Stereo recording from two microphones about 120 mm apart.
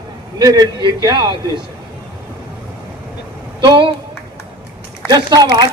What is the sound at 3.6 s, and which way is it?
Speech, 40° right (ahead or behind).